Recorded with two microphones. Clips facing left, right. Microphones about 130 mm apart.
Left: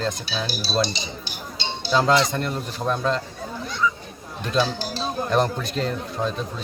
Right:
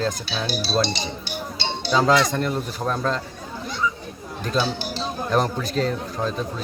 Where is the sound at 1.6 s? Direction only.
65° right (ahead or behind).